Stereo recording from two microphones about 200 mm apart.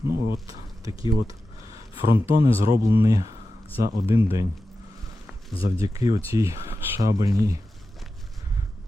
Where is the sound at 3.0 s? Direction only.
15° right (ahead or behind).